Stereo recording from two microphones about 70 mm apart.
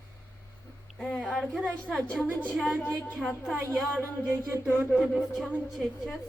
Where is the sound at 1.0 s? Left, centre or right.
Centre.